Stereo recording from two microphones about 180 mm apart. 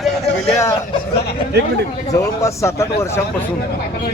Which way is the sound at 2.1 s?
15° left (ahead or behind).